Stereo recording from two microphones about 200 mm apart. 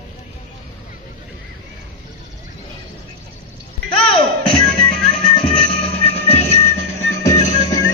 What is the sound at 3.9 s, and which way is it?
Music, 25° left (ahead or behind).